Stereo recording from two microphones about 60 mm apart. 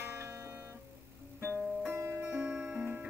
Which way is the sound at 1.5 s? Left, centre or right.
Right.